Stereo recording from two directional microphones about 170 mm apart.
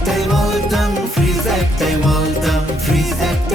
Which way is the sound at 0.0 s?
Centre (ahead or behind).